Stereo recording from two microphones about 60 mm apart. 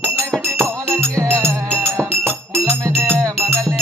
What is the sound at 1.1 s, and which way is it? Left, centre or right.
Music, right.